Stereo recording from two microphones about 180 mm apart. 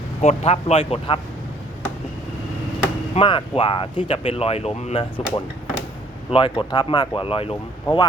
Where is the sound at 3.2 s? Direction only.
30° left (ahead or behind).